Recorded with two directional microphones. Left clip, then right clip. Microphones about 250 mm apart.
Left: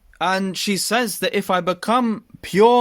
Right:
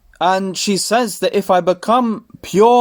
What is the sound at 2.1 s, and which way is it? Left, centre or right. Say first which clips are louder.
Speech: right 4 dB; left.